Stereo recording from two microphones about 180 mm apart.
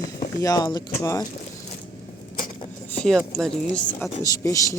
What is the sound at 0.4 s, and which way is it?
Speech, 25° left (ahead or behind).